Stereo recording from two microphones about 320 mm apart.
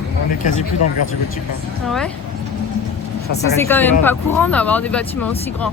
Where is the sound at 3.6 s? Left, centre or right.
Centre.